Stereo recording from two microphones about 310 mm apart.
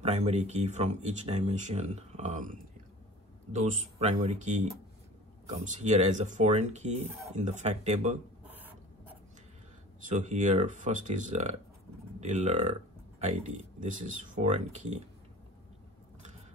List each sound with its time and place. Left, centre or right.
0.0 s speech: right
8.5 s a sound: centre
10.0 s speech: right
13.7 s speech: right